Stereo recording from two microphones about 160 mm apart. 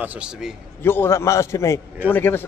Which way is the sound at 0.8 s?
15° left (ahead or behind).